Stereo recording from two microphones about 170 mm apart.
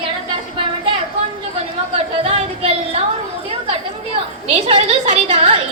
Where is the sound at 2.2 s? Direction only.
35° right (ahead or behind).